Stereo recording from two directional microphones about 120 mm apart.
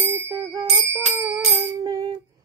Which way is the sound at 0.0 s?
20° right (ahead or behind).